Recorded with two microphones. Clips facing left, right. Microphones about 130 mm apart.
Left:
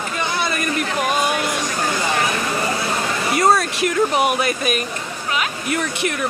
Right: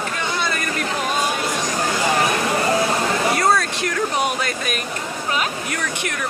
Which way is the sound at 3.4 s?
20° left (ahead or behind).